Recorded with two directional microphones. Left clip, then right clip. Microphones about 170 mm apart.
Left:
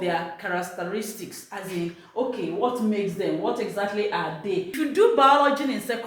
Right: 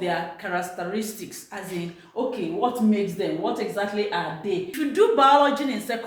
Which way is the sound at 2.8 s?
5° right (ahead or behind).